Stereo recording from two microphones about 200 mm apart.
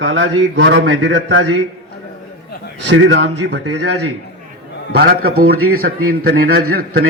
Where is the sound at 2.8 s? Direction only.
60° right (ahead or behind).